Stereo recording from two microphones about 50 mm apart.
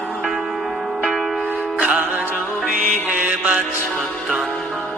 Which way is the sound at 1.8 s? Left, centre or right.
Right.